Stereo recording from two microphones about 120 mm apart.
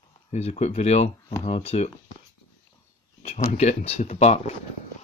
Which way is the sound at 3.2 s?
65° left (ahead or behind).